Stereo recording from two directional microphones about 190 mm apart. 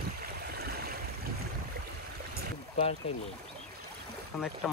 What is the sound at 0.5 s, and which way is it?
Stream, 55° right (ahead or behind).